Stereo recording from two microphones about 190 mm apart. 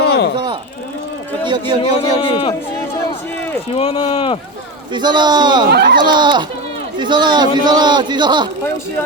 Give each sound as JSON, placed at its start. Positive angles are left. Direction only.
{"t": 0.3, "sound": "a sound", "side_deg": -25}
{"t": 1.5, "sound": "a man's voice", "side_deg": -25}
{"t": 1.8, "sound": "a man's voice", "side_deg": 30}
{"t": 3.8, "sound": "a man's voice", "side_deg": 30}
{"t": 4.9, "sound": "a man's voice", "side_deg": -25}
{"t": 5.7, "sound": "speech", "side_deg": -60}
{"t": 6.0, "sound": "a man's voice", "side_deg": -25}